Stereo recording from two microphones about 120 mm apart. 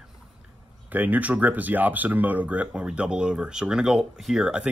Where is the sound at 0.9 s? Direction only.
15° right (ahead or behind).